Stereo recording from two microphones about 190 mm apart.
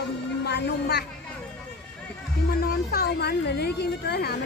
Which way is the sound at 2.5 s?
55° left (ahead or behind).